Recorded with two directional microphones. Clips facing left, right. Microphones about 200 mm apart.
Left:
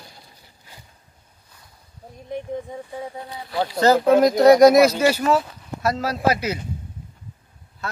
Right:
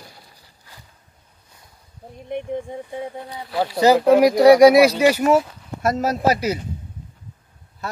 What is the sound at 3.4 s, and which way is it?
Speech, 5° right (ahead or behind).